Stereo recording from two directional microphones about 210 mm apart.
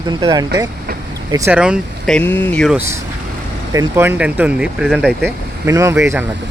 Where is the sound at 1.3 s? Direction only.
5° right (ahead or behind).